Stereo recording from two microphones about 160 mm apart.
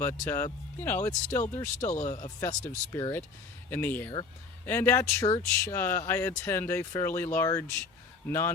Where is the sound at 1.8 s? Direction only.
50° left (ahead or behind).